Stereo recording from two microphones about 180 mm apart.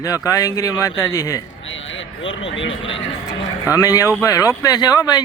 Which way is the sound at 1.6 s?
90° left.